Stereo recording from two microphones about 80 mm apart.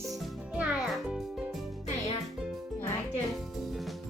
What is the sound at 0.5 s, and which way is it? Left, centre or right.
Music, centre.